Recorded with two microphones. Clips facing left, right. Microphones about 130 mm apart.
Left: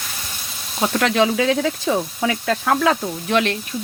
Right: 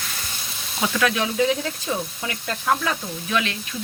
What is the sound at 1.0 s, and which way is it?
Sizzle, 80° left.